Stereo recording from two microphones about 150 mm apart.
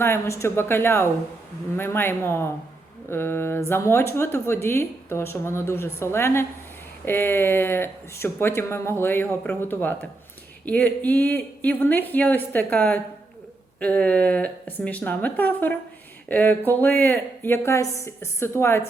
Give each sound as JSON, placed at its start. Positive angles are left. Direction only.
{"t": 0.0, "sound": "speech", "side_deg": 15}